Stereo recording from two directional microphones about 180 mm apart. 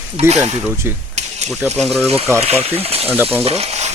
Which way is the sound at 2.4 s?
35° right (ahead or behind).